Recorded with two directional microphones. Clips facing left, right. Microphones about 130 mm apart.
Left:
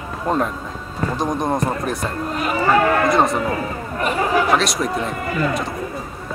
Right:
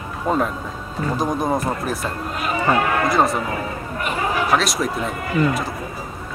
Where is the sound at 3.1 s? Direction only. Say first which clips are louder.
Left 1 dB; centre (ahead or behind).